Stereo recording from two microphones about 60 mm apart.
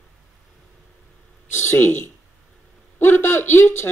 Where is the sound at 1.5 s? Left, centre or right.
Left.